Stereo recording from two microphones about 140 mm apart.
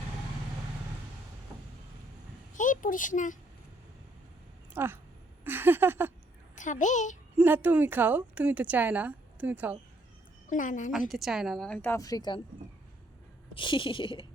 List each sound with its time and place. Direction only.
2.6 s speech: 70° left (ahead or behind)
4.7 s a woman's voice: 15° right (ahead or behind)
6.6 s a child's voice: 60° left (ahead or behind)
7.3 s a woman's voice: 15° right (ahead or behind)
10.4 s a child's voice: 65° left (ahead or behind)
11.1 s a woman's voice: centre (ahead or behind); by 12.4 s 30° left (ahead or behind)
13.5 s speech: 35° left (ahead or behind)